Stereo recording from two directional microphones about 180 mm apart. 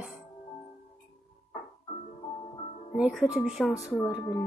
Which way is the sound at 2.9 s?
5° right (ahead or behind).